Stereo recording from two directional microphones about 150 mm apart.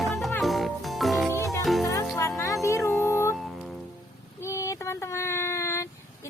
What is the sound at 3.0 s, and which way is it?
Music, 15° left (ahead or behind).